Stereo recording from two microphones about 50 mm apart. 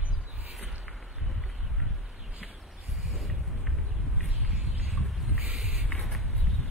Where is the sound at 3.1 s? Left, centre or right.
Centre.